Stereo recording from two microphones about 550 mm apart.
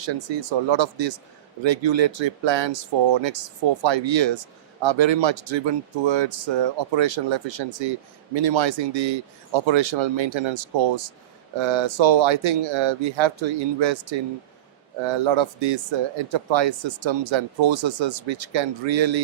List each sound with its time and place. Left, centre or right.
0.0 s speech: right